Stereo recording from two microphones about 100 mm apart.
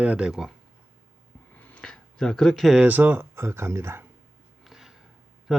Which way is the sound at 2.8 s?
15° right (ahead or behind).